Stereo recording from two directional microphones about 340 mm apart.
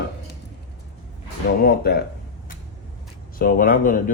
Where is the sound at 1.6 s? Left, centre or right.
Left.